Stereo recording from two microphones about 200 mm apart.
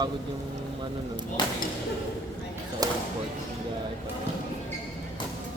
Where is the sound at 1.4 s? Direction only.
25° left (ahead or behind).